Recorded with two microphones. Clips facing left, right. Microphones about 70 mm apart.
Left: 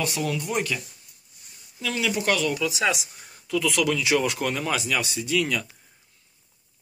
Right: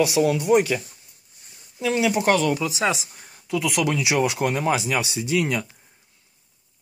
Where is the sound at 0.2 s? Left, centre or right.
Right.